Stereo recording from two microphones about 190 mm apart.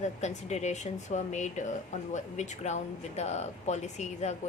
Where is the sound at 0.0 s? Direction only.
35° left (ahead or behind).